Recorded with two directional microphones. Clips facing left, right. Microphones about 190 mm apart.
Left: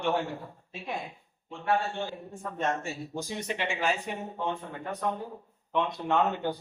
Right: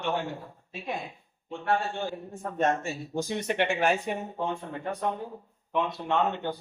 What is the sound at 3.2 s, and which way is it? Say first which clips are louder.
Speech: right 7 dB; 60° right (ahead or behind).